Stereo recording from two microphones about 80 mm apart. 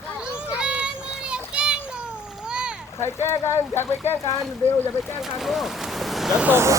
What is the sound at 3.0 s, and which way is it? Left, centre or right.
Speech, left.